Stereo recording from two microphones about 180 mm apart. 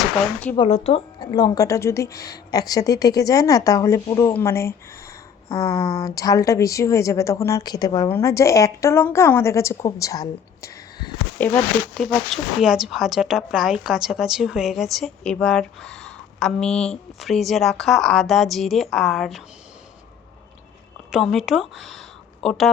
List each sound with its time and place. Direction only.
0.7 s a woman's voice: 30° left (ahead or behind)
11.3 s speech: 10° left (ahead or behind)
21.1 s speech: centre (ahead or behind)